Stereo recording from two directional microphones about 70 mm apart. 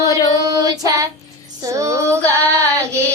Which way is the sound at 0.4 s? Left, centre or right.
Right.